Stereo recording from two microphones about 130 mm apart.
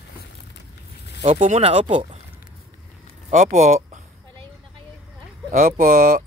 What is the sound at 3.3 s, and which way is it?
Speech, 65° right (ahead or behind).